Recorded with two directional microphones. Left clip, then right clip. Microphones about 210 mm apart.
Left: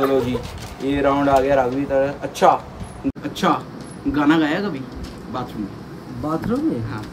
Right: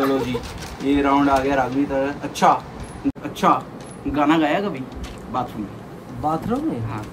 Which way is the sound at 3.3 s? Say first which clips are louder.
Right 2 dB; 10° left (ahead or behind).